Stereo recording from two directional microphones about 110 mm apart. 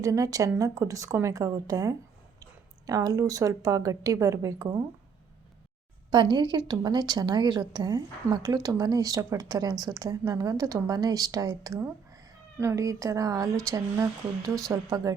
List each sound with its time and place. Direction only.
0.0 s a woman's voice: 30° right (ahead or behind)
6.1 s a woman's voice: 45° right (ahead or behind)